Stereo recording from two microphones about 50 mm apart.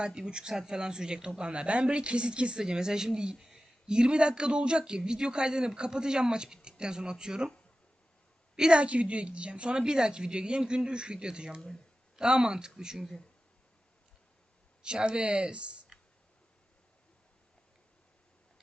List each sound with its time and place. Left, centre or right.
0.0 s a man's voice: centre
3.3 s a sound: centre
3.8 s a man's voice: centre
8.5 s a man's voice: centre
14.8 s a woman's voice: centre
15.9 s clicking: centre